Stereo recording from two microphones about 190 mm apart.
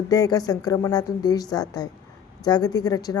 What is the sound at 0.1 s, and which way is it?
Speech, 20° left (ahead or behind).